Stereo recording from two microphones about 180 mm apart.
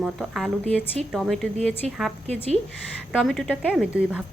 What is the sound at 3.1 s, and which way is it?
A woman's voice, centre (ahead or behind).